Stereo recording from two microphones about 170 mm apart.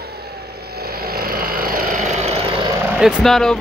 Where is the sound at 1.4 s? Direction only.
60° right (ahead or behind); by 2.4 s 40° right (ahead or behind).